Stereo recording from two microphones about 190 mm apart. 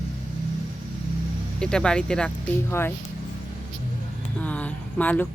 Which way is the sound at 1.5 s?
5° left (ahead or behind).